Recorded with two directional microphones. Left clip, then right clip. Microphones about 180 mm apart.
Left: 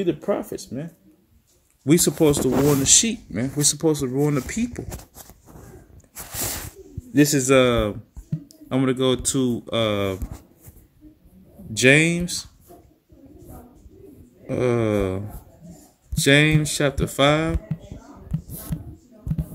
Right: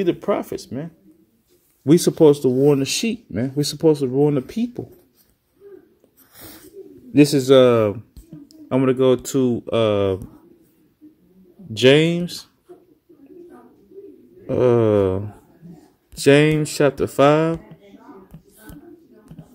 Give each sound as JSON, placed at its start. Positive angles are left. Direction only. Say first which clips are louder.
{"t": 0.0, "sound": "speech", "louder": "right 3 dB", "side_deg": -20}
{"t": 1.9, "sound": "speech", "louder": "right 5 dB", "side_deg": -10}
{"t": 7.2, "sound": "speech", "louder": "right 4 dB", "side_deg": -5}
{"t": 11.7, "sound": "speech", "louder": "right 2 dB", "side_deg": -5}
{"t": 14.4, "sound": "speech", "louder": "right 6 dB", "side_deg": -10}